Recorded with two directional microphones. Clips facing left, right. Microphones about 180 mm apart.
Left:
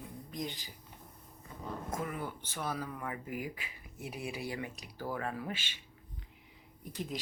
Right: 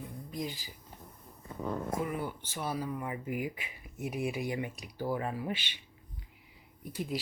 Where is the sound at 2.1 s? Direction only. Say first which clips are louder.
Right 4 dB; 10° right (ahead or behind).